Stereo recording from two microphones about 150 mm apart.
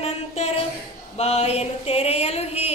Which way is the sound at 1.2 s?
45° left (ahead or behind).